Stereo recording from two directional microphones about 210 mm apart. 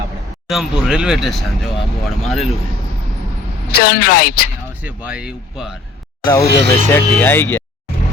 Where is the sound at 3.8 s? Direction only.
45° left (ahead or behind).